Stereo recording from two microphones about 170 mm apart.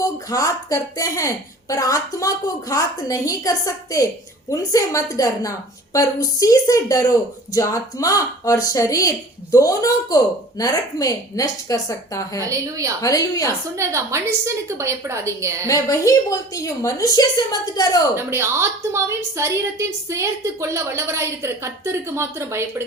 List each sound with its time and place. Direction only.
0.0 s speech: 20° left (ahead or behind)
12.5 s a woman's voice: 20° right (ahead or behind)
13.0 s speech: 20° left (ahead or behind)
13.5 s a woman's voice: 15° right (ahead or behind)
15.6 s speech: 20° left (ahead or behind)
18.2 s a woman's voice: 15° right (ahead or behind)